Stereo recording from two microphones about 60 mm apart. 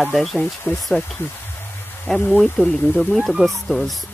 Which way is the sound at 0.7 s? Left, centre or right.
Left.